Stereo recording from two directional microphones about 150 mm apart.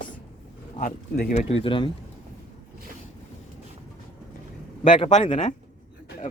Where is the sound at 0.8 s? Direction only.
90° left.